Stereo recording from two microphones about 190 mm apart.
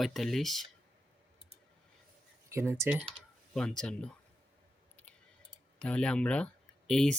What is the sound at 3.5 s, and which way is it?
Speech, 5° left (ahead or behind).